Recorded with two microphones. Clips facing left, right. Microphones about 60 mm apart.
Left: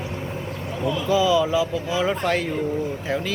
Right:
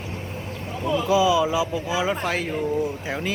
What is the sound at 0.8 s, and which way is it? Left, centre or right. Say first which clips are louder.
Speech: right 1 dB; centre.